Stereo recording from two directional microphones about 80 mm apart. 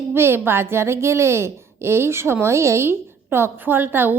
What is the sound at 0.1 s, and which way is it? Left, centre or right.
A woman's voice, right.